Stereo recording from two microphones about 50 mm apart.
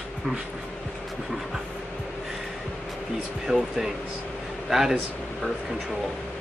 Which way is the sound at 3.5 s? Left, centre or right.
Centre.